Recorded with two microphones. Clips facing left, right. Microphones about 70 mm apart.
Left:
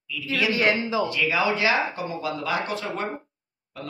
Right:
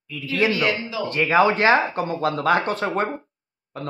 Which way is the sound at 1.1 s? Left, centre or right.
Right.